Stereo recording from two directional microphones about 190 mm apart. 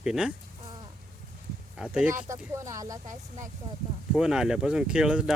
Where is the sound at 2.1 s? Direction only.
15° right (ahead or behind).